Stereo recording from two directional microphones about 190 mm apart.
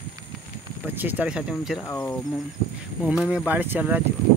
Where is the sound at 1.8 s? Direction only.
10° left (ahead or behind).